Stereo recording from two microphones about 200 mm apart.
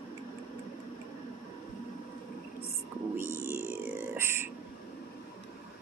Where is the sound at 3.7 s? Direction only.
10° right (ahead or behind).